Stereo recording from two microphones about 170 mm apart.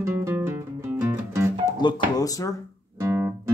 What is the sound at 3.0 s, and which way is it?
Guitar, 15° right (ahead or behind).